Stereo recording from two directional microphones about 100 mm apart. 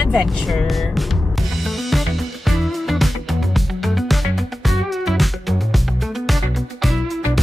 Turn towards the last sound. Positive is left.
turn(degrees=0)  # may be behind; listen again after turning